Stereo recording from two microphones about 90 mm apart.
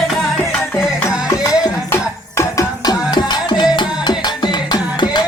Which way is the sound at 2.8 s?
50° left (ahead or behind).